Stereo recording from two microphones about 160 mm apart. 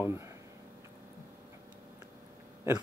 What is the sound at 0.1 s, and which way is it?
Speech, 20° right (ahead or behind).